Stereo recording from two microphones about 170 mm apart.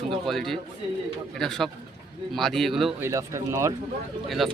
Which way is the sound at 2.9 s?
15° right (ahead or behind).